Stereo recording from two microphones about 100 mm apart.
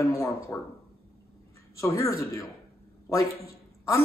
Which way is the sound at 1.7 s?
30° left (ahead or behind).